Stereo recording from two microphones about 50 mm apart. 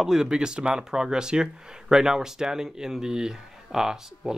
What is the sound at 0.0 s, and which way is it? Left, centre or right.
Speech, centre.